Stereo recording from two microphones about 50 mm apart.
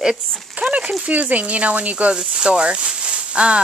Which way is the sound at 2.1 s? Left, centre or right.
Centre.